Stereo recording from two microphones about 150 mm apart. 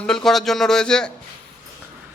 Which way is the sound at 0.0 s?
5° left (ahead or behind).